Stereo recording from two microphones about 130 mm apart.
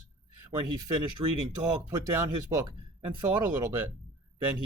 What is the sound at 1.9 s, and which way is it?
Speech, 25° right (ahead or behind).